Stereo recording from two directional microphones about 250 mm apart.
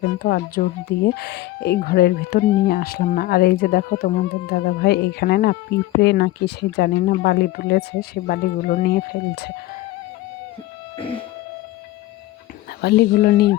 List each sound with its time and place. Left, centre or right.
0.0 s speech: left
10.9 s music: left
12.8 s speech: left